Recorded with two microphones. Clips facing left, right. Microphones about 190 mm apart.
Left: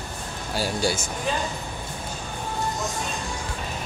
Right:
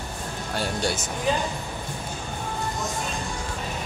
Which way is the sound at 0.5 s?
5° left (ahead or behind).